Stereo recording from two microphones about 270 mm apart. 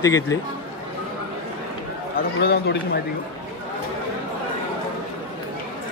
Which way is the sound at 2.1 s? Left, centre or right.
Left.